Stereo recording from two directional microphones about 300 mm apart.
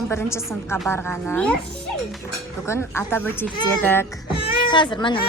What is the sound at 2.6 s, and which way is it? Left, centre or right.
A woman's voice, centre.